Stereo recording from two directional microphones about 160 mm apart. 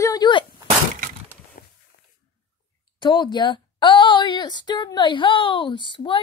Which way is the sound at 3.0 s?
30° left (ahead or behind).